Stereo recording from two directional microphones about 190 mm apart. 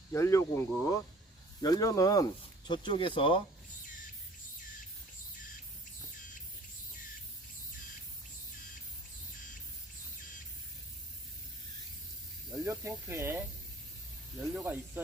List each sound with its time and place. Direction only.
0.1 s speech: 15° left (ahead or behind)
12.5 s snake: 15° right (ahead or behind)
13.1 s speech: 15° right (ahead or behind)
14.4 s speech: 10° right (ahead or behind)